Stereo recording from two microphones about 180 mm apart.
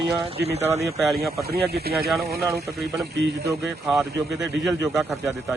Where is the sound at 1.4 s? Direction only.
60° right (ahead or behind).